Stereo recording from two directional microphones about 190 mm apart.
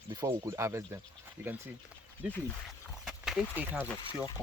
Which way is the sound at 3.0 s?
5° right (ahead or behind).